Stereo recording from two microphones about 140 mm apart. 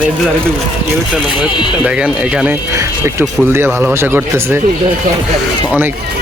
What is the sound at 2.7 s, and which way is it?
Speech, 20° right (ahead or behind).